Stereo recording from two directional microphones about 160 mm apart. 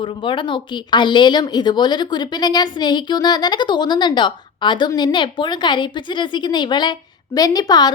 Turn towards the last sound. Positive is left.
turn(degrees=25)  # may be behind; listen again after turning